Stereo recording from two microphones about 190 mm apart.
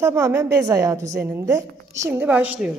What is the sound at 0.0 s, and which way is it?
A woman's voice, 15° right (ahead or behind).